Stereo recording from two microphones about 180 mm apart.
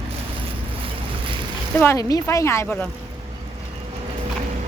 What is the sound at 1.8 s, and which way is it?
A woman's voice, 15° left (ahead or behind).